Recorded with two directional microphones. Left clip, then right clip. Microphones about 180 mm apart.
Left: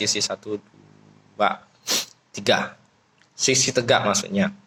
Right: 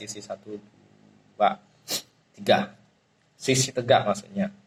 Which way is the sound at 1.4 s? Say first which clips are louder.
Left 1 dB; 25° left (ahead or behind).